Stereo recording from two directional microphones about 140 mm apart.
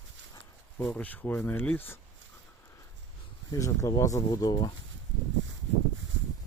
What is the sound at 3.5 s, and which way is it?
Speech, 25° left (ahead or behind).